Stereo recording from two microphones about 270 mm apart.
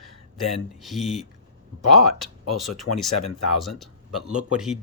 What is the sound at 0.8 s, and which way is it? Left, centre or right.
Speech, centre.